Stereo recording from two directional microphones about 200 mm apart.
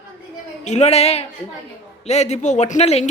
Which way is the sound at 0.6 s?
35° left (ahead or behind).